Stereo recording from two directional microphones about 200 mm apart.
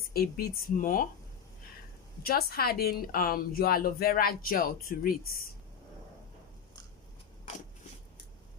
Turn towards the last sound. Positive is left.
turn(degrees=35)  # may be behind; listen again after turning